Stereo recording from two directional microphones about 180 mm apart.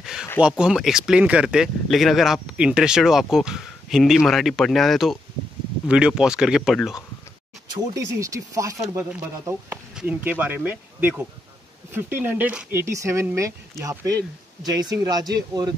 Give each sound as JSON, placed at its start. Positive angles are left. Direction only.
{"t": 0.0, "sound": "a sound", "side_deg": -5}
{"t": 0.4, "sound": "speech", "side_deg": -5}
{"t": 8.2, "sound": "speech", "side_deg": -20}